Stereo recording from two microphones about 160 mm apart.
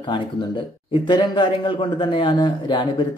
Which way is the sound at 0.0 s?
30° left (ahead or behind).